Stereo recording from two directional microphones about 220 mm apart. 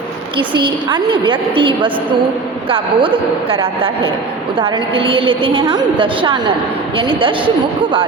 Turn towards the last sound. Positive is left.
turn(degrees=-25)  # may be behind; listen again after turning